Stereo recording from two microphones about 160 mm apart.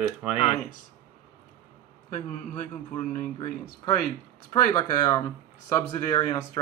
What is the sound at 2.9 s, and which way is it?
Speech, 55° left (ahead or behind).